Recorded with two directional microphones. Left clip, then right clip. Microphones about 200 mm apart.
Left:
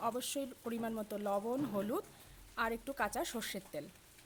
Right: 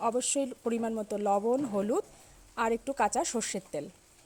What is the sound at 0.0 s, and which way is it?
Speech, 25° right (ahead or behind).